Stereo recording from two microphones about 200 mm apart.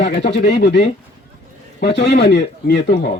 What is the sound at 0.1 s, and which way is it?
Speech, 60° left (ahead or behind).